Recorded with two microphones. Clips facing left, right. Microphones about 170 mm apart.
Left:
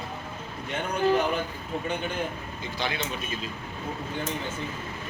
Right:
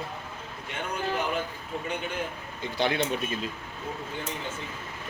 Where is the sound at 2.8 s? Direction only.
55° right (ahead or behind).